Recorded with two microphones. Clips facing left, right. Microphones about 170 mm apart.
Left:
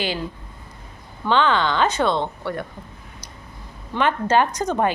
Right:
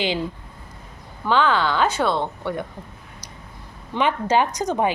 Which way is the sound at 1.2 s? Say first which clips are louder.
Even; 5° right (ahead or behind).